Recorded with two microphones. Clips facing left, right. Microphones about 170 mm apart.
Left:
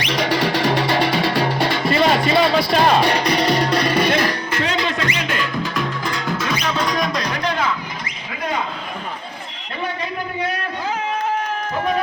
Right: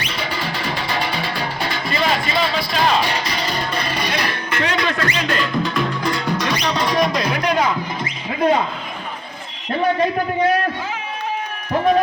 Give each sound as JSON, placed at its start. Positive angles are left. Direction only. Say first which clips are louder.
{"t": 0.0, "sound": "music", "louder": "left 6 dB", "side_deg": 75}
{"t": 4.3, "sound": "music", "louder": "even", "side_deg": 30}